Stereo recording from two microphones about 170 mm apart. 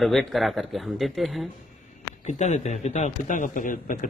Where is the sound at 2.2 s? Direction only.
40° left (ahead or behind).